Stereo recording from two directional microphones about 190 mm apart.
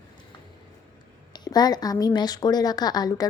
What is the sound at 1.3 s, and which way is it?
Speech, 20° left (ahead or behind).